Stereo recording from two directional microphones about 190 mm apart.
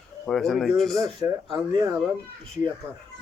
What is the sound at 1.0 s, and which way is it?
Speech, 20° right (ahead or behind).